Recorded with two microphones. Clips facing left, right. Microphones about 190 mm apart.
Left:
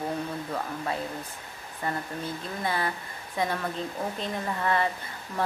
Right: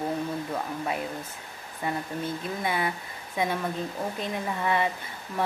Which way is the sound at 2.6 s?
15° right (ahead or behind).